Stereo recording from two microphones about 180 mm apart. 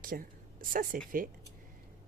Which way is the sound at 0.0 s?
50° right (ahead or behind).